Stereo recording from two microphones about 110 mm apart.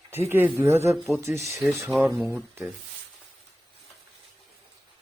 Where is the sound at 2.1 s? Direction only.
20° right (ahead or behind).